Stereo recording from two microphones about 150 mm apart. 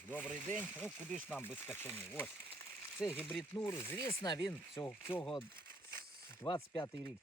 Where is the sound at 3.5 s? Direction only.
15° left (ahead or behind).